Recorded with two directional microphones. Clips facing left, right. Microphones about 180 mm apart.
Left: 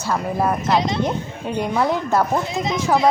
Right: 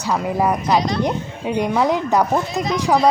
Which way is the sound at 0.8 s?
20° left (ahead or behind).